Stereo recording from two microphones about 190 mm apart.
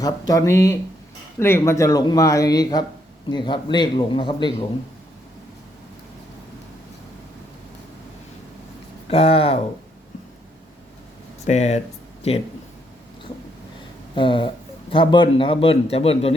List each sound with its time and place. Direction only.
0.0 s speech: 15° left (ahead or behind)
9.0 s speech: 30° left (ahead or behind)
11.4 s speech: 35° left (ahead or behind)
14.2 s speech: 25° left (ahead or behind)